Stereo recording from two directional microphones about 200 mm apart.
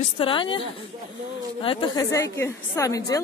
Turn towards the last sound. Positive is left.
turn(degrees=15)  # may be behind; listen again after turning